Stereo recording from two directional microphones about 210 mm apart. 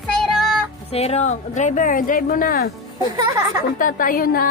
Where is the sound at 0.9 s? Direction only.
30° left (ahead or behind).